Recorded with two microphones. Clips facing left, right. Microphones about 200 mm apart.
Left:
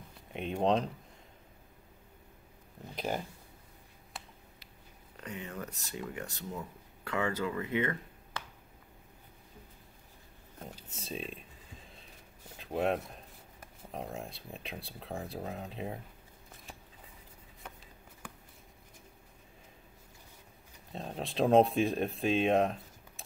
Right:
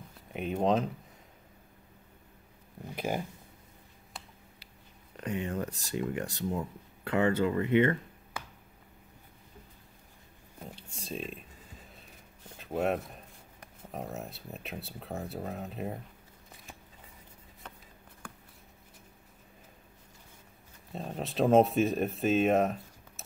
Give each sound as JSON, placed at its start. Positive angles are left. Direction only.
{"t": 0.3, "sound": "speech", "side_deg": -5}
{"t": 5.5, "sound": "speech", "side_deg": -30}
{"t": 10.9, "sound": "speech", "side_deg": 0}
{"t": 12.5, "sound": "speech", "side_deg": 0}
{"t": 17.6, "sound": "a sound", "side_deg": 10}
{"t": 20.9, "sound": "speech", "side_deg": 0}